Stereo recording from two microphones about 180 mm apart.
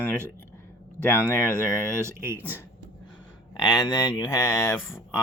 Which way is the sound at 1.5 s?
15° right (ahead or behind).